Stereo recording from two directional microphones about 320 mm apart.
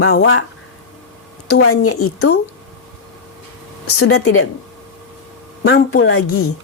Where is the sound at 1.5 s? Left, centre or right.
Left.